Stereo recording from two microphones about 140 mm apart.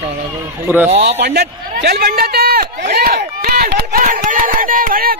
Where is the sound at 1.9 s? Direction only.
90° right.